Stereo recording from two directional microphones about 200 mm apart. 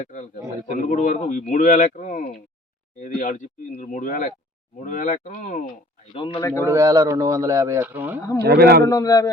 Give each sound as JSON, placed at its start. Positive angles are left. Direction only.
{"t": 0.0, "sound": "speech", "side_deg": 35}
{"t": 6.1, "sound": "a man's voice", "side_deg": 25}
{"t": 6.4, "sound": "a man's voice", "side_deg": 15}
{"t": 6.7, "sound": "a man's voice", "side_deg": -15}
{"t": 8.4, "sound": "a man's voice", "side_deg": -50}
{"t": 8.8, "sound": "a man's voice", "side_deg": 15}